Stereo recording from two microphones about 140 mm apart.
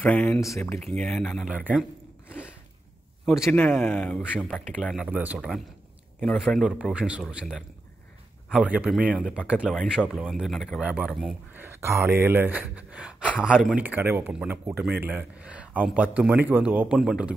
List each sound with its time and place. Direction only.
0.0 s speech: 5° left (ahead or behind)
0.4 s speech: 20° left (ahead or behind)
0.9 s speech: 5° left (ahead or behind)
3.3 s speech: 5° right (ahead or behind)
3.5 s speech: 15° left (ahead or behind)
4.5 s speech: centre (ahead or behind)
8.5 s speech: 10° right (ahead or behind)
11.5 s a sound: 15° right (ahead or behind)
12.2 s speech: 15° right (ahead or behind)